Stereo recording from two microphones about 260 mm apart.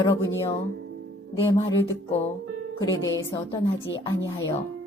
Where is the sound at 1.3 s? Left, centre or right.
Left.